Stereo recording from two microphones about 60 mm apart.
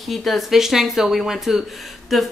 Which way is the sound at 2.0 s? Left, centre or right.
Centre.